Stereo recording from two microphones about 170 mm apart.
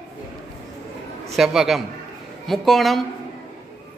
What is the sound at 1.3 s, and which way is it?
Speech, centre (ahead or behind).